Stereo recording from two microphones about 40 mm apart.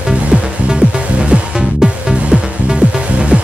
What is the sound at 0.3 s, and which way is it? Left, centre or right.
Music, right.